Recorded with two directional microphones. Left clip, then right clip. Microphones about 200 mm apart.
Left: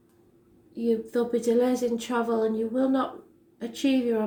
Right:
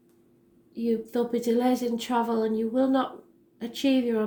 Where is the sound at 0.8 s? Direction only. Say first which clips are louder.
Left 1 dB; 40° right (ahead or behind).